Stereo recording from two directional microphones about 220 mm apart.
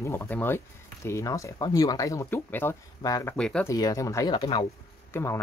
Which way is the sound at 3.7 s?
15° left (ahead or behind).